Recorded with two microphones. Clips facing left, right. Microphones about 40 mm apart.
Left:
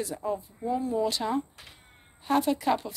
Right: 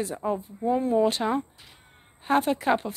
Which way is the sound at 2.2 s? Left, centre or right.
Right.